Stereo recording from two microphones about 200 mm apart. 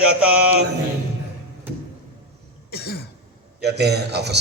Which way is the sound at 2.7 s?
55° left (ahead or behind).